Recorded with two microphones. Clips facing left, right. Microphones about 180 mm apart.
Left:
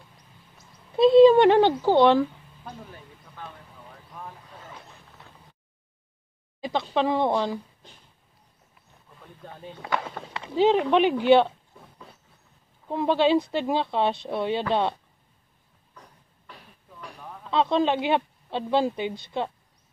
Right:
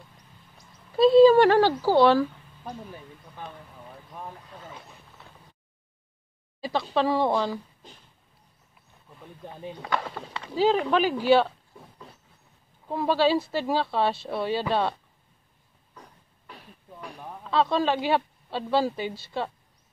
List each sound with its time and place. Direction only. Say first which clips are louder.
1.4 s speech: left 1 dB; 20° left (ahead or behind)
6.6 s speech: even; 20° left (ahead or behind)
9.2 s speech: right 3 dB; 15° right (ahead or behind)
9.8 s speech: left 1 dB; 5° left (ahead or behind)
10.4 s speech: left 2 dB; 20° left (ahead or behind)
12.9 s speech: left 2 dB; 20° left (ahead or behind)
17.5 s a woman's voice: left 1 dB; 20° left (ahead or behind)